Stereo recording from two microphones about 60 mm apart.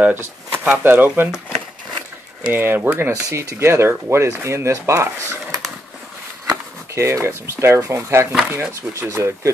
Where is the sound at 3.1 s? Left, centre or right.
Right.